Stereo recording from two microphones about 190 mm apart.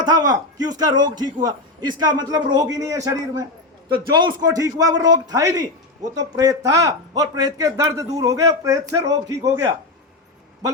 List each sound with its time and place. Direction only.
0.0 s a man's voice: 20° right (ahead or behind)